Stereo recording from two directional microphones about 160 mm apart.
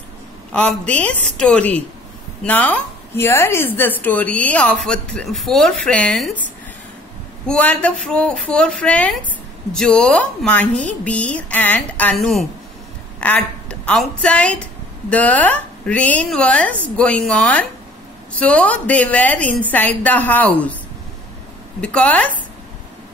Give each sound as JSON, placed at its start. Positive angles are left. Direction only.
{"t": 0.5, "sound": "a woman's voice", "side_deg": 5}
{"t": 21.8, "sound": "a woman's voice", "side_deg": 5}